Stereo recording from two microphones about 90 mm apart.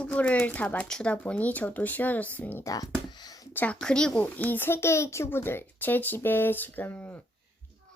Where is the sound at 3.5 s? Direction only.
20° left (ahead or behind).